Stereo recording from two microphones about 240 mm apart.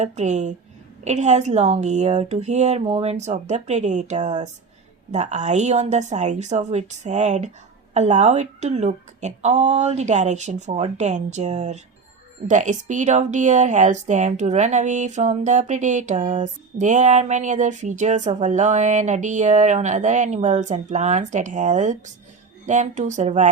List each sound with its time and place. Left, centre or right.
0.0 s speech: right